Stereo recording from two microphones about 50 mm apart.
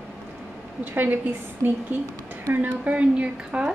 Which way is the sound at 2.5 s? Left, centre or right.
Right.